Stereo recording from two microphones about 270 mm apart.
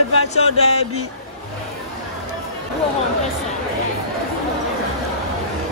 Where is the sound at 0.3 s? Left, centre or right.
Left.